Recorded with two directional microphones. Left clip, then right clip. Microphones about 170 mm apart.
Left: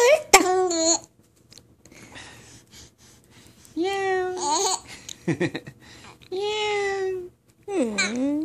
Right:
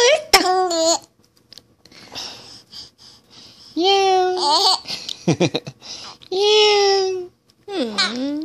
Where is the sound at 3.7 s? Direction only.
50° right (ahead or behind).